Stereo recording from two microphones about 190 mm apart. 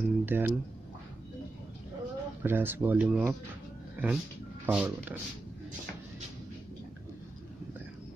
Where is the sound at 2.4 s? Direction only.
10° right (ahead or behind).